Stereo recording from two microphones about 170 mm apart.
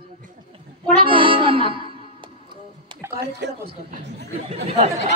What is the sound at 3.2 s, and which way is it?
Speech, 80° right.